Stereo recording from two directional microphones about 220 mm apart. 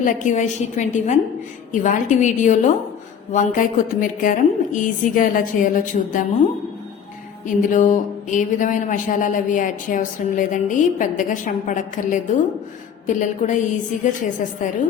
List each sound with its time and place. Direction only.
0.0 s speech: 35° left (ahead or behind)
7.4 s speech: 35° left (ahead or behind)